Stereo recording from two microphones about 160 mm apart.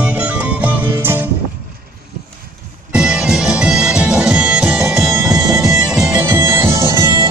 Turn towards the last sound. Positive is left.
turn(degrees=-20)  # may be behind; listen again after turning